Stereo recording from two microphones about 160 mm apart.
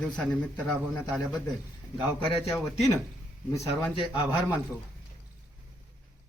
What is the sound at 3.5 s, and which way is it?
Speech, 30° left (ahead or behind).